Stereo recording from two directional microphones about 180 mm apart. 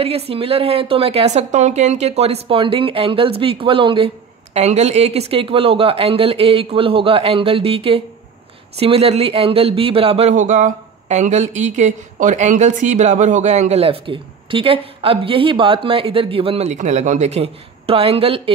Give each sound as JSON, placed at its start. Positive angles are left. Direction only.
{"t": 0.0, "sound": "speech", "side_deg": -30}